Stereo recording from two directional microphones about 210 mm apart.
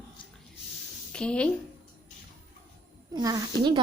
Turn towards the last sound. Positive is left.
turn(degrees=-20)  # may be behind; listen again after turning